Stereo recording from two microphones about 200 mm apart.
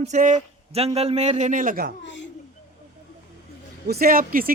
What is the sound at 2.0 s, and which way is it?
Speech, 65° left (ahead or behind).